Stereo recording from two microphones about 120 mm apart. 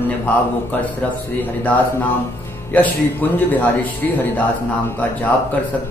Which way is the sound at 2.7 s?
15° left (ahead or behind).